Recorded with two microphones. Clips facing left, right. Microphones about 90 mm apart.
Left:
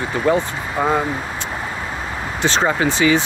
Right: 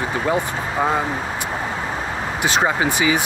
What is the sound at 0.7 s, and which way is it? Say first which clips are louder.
Speech: left 2 dB; centre (ahead or behind).